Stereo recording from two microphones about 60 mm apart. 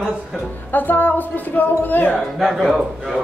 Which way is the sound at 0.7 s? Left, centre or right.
Left.